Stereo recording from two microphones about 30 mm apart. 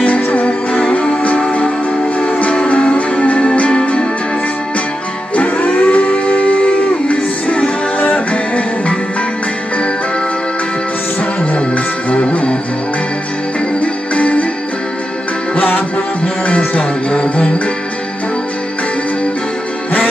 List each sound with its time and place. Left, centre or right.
0.0 s music: left
2.2 s music: left
2.5 s music: left
5.3 s a sound: left
8.1 s music: left
11.5 s music: left
13.7 s music: left
15.5 s music: left
16.4 s music: left
17.1 s music: left